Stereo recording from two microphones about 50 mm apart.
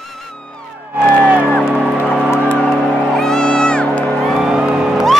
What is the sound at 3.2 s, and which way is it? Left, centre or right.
Music, centre.